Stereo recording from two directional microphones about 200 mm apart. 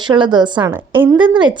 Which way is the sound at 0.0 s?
20° right (ahead or behind).